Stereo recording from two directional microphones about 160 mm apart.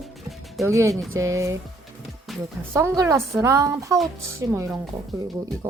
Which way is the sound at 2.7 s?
20° right (ahead or behind).